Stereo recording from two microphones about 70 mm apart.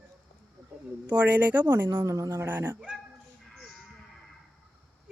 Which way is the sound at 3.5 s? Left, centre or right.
Centre.